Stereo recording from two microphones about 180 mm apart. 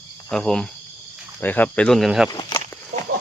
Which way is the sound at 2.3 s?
20° left (ahead or behind).